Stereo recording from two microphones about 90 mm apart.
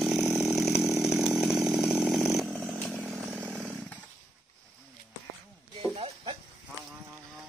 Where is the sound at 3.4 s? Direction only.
15° left (ahead or behind).